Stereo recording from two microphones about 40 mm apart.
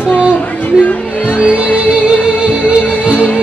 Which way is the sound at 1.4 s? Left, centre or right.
Right.